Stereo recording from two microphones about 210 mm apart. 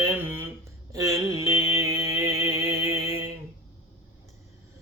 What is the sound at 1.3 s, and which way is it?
Music, 15° right (ahead or behind).